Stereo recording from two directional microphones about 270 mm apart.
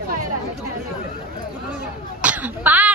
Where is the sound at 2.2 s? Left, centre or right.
Centre.